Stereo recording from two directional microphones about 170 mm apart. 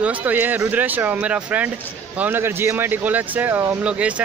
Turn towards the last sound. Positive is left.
turn(degrees=-5)  # may be behind; listen again after turning